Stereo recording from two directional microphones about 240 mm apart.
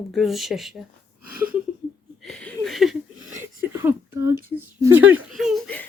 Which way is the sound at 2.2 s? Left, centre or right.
Centre.